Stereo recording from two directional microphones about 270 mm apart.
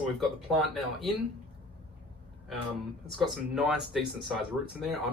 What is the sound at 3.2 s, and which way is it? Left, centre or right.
Speech, centre.